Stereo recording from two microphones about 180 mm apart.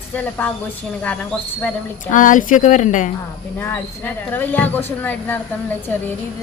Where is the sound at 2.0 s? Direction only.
45° left (ahead or behind).